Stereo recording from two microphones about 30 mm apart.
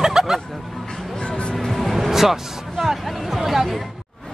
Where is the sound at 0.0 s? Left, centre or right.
Centre.